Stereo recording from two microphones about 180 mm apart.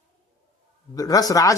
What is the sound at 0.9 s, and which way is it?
Speech, 20° left (ahead or behind).